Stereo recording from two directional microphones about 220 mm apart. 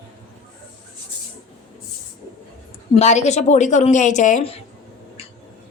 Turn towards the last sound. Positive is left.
turn(degrees=25)  # may be behind; listen again after turning